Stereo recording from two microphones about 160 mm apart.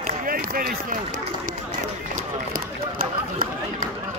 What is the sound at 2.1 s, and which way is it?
Run, 60° right (ahead or behind).